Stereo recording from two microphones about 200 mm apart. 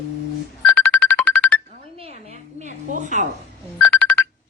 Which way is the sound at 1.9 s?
30° right (ahead or behind).